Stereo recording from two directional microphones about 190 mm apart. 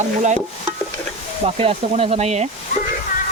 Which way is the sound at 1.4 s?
30° right (ahead or behind).